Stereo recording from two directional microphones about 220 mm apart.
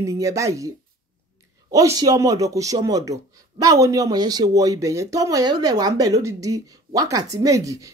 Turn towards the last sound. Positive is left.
turn(degrees=-15)  # may be behind; listen again after turning